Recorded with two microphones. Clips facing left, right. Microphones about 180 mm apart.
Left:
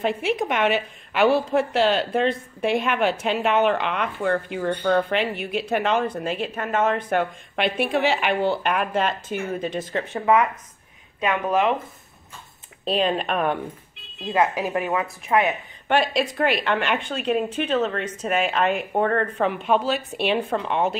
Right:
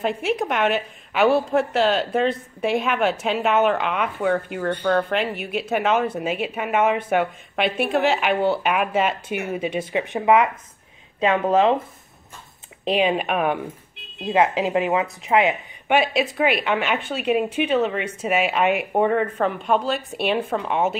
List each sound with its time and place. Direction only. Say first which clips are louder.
0.0 s a woman's voice: even; centre (ahead or behind); by 11.7 s 30° right (ahead or behind)
12.8 s speech: right 2 dB; 10° right (ahead or behind)
14.2 s a woman's voice: right 3 dB; 20° right (ahead or behind)
15.9 s speech: right 1 dB; 5° right (ahead or behind)